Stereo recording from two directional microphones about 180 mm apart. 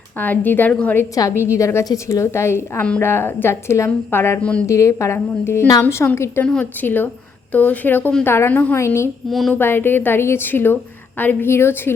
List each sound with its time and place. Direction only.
0.2 s a woman's voice: 10° left (ahead or behind)
9.3 s speech: centre (ahead or behind)
9.6 s a woman's voice: 10° left (ahead or behind)